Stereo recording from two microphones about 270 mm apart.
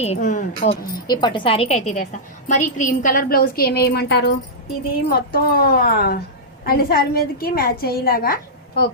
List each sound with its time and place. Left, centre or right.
0.0 s speech: left
1.0 s a woman's voice: centre; by 8.9 s left